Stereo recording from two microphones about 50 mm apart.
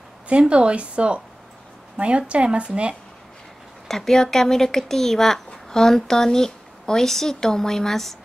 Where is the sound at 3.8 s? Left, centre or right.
Centre.